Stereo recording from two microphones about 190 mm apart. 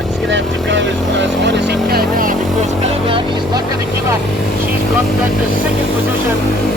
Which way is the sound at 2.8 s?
30° right (ahead or behind).